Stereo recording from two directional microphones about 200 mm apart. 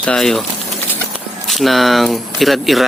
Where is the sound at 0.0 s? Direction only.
5° left (ahead or behind).